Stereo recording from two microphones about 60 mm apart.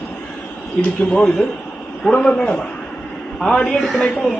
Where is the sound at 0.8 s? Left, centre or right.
Centre.